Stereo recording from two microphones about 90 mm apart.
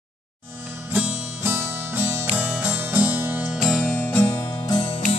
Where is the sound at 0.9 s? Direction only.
25° right (ahead or behind).